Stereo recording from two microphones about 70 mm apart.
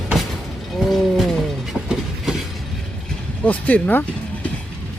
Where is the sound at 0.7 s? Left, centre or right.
Centre.